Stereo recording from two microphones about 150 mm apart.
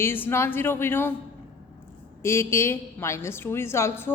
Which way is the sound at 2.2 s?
15° left (ahead or behind).